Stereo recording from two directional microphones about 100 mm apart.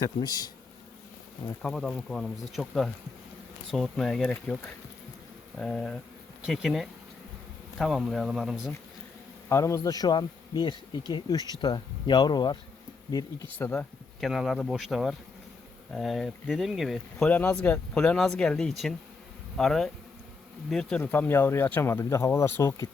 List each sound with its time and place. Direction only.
0.0 s speech: 40° left (ahead or behind)
1.6 s speech: 5° left (ahead or behind)
9.5 s speech: 30° left (ahead or behind); by 12.5 s 45° left (ahead or behind)
13.6 s speech: 15° left (ahead or behind)
14.2 s speech: centre (ahead or behind)
17.2 s speech: 15° left (ahead or behind)
21.0 s speech: 20° left (ahead or behind)